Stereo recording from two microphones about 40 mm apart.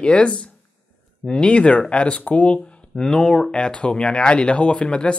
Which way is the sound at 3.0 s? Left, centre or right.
Centre.